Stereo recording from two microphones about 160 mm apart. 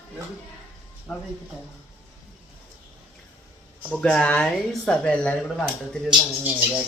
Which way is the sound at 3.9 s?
5° left (ahead or behind).